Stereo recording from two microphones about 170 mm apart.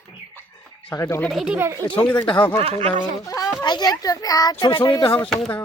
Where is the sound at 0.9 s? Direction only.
20° left (ahead or behind).